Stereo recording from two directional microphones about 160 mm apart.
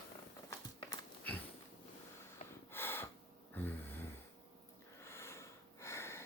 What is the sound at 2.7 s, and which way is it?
Gasp, 15° left (ahead or behind).